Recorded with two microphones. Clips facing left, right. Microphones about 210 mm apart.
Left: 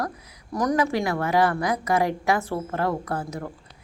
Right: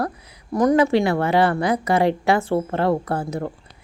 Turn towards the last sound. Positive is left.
turn(degrees=-30)  # may be behind; listen again after turning